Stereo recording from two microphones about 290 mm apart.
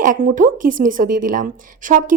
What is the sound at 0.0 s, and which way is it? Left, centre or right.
Speech, right.